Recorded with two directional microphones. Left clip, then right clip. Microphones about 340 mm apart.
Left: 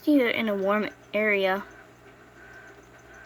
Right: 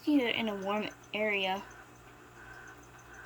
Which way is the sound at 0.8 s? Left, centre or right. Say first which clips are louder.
Left 7 dB; right.